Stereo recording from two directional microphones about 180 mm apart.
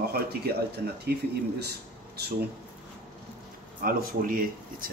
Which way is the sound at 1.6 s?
65° right (ahead or behind).